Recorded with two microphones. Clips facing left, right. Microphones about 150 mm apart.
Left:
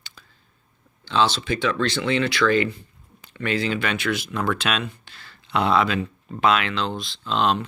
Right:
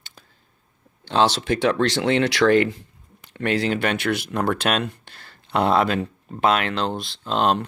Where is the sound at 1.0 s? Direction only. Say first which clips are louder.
Right 2 dB; 60° right (ahead or behind).